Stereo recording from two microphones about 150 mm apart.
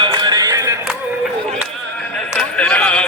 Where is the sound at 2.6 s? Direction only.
5° left (ahead or behind).